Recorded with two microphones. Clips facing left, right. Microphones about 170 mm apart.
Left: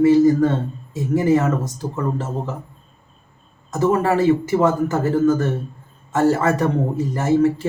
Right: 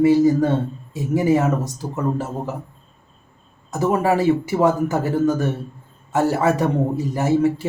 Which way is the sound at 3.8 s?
10° right (ahead or behind).